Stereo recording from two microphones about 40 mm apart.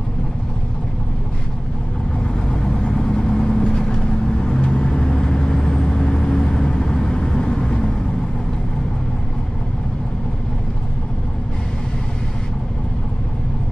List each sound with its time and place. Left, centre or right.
2.4 s vehicle: centre